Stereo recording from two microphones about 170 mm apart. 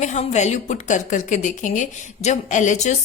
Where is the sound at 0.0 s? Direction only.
45° left (ahead or behind).